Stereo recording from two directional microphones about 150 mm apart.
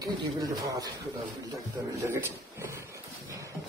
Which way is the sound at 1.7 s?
20° right (ahead or behind).